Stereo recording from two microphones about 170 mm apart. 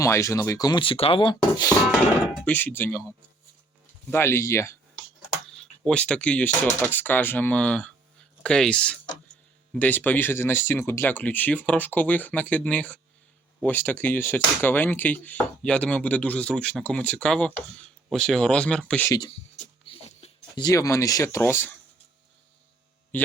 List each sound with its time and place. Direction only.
0.0 s speech: 20° left (ahead or behind)
2.4 s speech: 10° left (ahead or behind)
4.1 s speech: 15° left (ahead or behind)
5.8 s speech: 5° left (ahead or behind)
19.9 s a sound: 35° left (ahead or behind)
20.6 s speech: 20° left (ahead or behind)
23.1 s speech: 10° left (ahead or behind)